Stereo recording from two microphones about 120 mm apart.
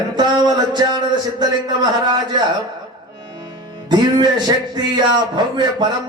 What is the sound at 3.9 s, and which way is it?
Speech, 35° right (ahead or behind).